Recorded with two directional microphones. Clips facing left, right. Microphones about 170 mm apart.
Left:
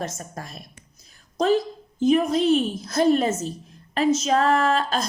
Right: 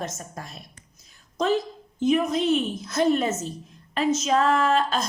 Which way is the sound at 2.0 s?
35° left (ahead or behind).